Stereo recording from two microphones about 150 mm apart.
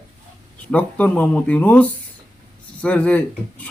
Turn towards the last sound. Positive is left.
turn(degrees=10)  # may be behind; listen again after turning